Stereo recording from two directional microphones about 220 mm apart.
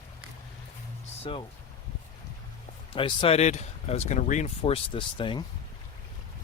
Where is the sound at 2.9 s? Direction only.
25° left (ahead or behind).